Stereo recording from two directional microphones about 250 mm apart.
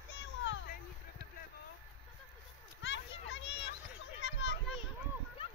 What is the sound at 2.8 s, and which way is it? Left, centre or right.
Children playing, left.